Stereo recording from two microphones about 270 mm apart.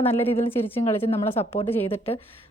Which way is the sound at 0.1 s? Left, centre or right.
Left.